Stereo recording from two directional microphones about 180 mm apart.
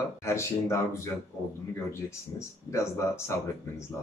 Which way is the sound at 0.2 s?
15° left (ahead or behind).